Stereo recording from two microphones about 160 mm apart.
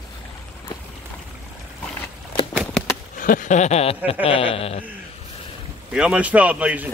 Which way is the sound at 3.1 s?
55° left (ahead or behind).